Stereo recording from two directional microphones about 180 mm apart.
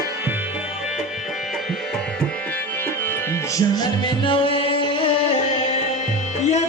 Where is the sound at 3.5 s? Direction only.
25° left (ahead or behind).